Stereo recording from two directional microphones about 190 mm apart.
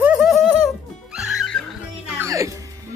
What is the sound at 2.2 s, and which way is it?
Music, 15° right (ahead or behind).